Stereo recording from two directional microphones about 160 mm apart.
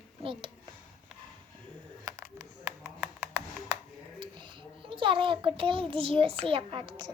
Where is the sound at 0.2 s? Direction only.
35° right (ahead or behind).